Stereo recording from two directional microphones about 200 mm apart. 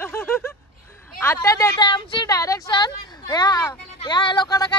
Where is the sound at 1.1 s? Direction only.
15° left (ahead or behind).